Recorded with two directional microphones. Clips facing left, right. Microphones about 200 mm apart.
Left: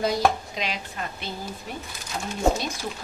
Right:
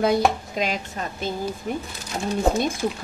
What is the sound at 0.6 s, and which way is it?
Speech, 45° right (ahead or behind).